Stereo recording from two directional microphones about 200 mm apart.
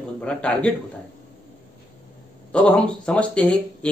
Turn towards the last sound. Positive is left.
turn(degrees=5)  # may be behind; listen again after turning